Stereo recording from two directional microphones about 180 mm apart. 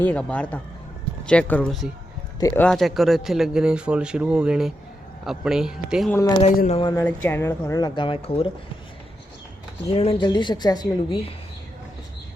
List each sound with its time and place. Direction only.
0.0 s speech: 10° left (ahead or behind)
2.4 s speech: 15° left (ahead or behind)
2.6 s a man's voice: centre (ahead or behind)
6.7 s speech: 30° left (ahead or behind)
6.9 s speech: 10° left (ahead or behind); by 8.4 s 30° left (ahead or behind)
9.9 s speech: 35° left (ahead or behind)